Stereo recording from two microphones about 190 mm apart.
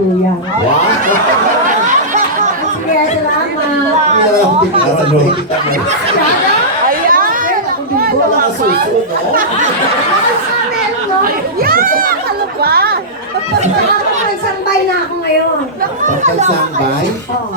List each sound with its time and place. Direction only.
6.8 s chatter: 50° right (ahead or behind)
11.2 s speech: 50° right (ahead or behind)